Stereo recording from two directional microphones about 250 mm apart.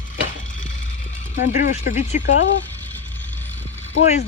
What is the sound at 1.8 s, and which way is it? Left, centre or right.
Speech, left.